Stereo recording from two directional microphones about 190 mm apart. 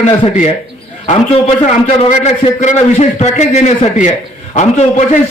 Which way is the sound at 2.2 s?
35° left (ahead or behind).